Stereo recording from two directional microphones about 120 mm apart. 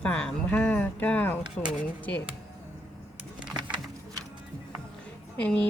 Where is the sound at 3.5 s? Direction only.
40° right (ahead or behind).